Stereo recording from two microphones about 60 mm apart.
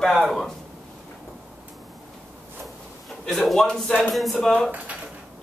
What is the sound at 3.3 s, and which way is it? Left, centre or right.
Speech, centre.